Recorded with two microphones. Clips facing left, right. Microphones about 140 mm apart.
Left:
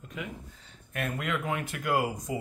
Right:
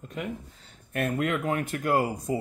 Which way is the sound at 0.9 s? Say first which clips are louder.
Right 5 dB; 50° right (ahead or behind).